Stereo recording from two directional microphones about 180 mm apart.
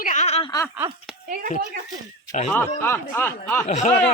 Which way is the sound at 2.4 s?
10° left (ahead or behind).